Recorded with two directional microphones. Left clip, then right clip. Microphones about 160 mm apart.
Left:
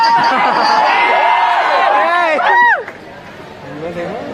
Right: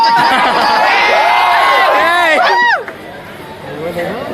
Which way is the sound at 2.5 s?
40° left (ahead or behind).